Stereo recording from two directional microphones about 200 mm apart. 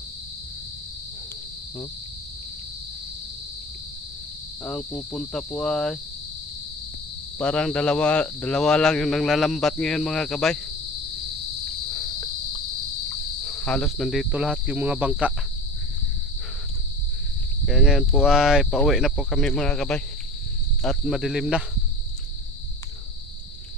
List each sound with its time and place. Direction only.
4.6 s speech: 5° left (ahead or behind)
7.3 s speech: 5° left (ahead or behind)
11.9 s cricket: 20° left (ahead or behind)
13.1 s cricket: 5° left (ahead or behind)
17.6 s speech: centre (ahead or behind)